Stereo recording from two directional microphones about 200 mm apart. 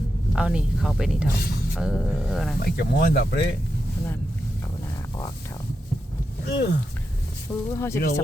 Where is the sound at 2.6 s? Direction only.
50° left (ahead or behind).